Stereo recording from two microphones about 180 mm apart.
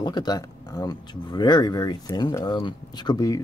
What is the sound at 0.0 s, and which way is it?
Speech, 20° left (ahead or behind).